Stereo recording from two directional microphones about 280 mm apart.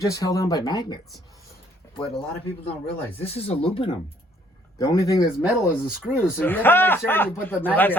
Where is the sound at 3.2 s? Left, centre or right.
Left.